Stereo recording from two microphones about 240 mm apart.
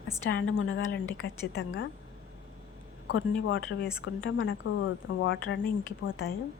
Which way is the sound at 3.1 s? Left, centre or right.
Left.